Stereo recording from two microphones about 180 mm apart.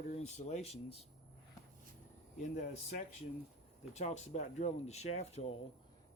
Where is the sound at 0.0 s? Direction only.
40° left (ahead or behind).